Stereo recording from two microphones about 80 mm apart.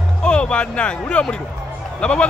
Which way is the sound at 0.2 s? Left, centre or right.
Centre.